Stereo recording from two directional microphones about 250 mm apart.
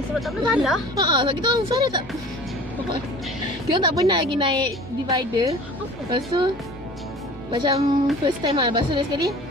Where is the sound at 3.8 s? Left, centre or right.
Centre.